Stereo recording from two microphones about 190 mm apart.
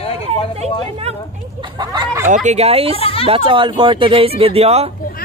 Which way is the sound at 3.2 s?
30° right (ahead or behind).